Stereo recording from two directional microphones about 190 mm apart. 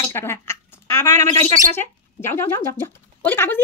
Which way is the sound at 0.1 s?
15° left (ahead or behind).